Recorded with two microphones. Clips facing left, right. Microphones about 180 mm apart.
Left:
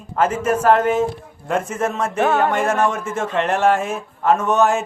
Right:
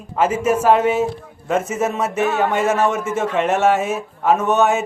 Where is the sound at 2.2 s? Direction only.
55° left (ahead or behind).